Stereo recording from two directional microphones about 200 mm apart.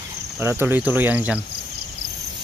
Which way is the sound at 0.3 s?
10° right (ahead or behind).